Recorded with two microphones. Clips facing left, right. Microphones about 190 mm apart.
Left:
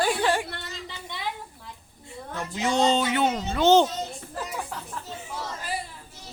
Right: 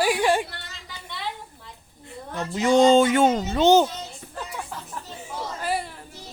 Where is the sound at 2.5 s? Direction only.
50° right (ahead or behind).